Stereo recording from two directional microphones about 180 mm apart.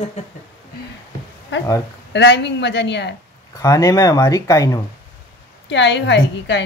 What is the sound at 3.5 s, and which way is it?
Speech, 20° left (ahead or behind).